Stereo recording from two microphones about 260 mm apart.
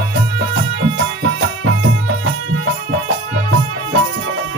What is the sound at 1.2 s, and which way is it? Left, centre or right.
Music, right.